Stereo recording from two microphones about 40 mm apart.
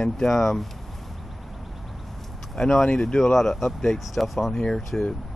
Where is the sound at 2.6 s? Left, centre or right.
Centre.